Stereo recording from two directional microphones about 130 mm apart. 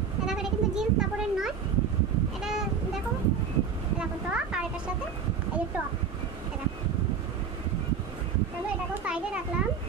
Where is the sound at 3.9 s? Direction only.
10° right (ahead or behind).